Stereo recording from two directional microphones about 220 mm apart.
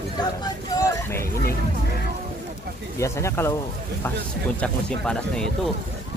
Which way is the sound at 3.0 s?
15° left (ahead or behind).